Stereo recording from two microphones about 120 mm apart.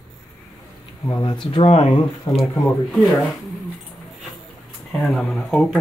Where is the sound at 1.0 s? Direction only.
35° left (ahead or behind).